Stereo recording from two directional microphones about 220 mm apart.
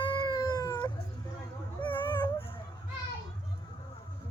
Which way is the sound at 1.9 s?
20° left (ahead or behind).